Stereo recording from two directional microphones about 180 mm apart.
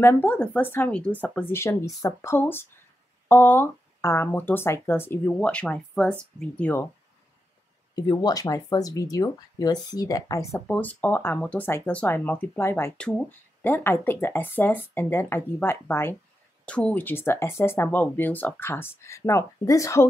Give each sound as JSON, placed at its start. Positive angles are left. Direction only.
{"t": 0.0, "sound": "speech", "side_deg": 10}
{"t": 7.9, "sound": "speech", "side_deg": 20}